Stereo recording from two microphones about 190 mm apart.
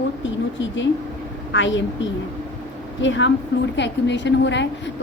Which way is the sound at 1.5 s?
75° left (ahead or behind).